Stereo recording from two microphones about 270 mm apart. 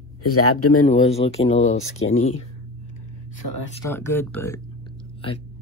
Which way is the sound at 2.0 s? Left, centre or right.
Left.